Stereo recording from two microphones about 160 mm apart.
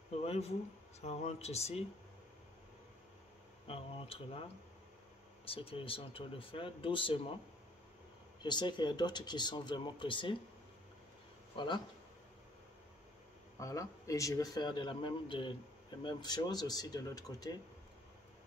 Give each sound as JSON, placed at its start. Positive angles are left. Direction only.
{"t": 0.2, "sound": "speech", "side_deg": 40}
{"t": 3.6, "sound": "speech", "side_deg": 35}
{"t": 8.4, "sound": "speech", "side_deg": 30}
{"t": 11.5, "sound": "speech", "side_deg": 30}
{"t": 13.6, "sound": "speech", "side_deg": 20}